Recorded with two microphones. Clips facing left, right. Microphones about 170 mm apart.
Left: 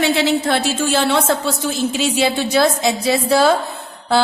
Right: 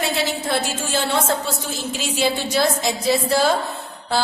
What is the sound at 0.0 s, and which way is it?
A woman's voice, 90° left.